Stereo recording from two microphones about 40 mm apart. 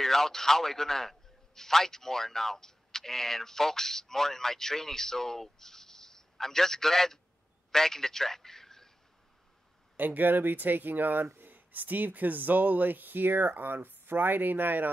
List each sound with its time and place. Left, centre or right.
0.0 s a man's voice: centre
9.9 s speech: right